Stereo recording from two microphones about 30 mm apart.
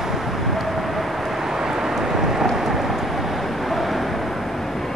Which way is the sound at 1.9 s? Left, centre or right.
Centre.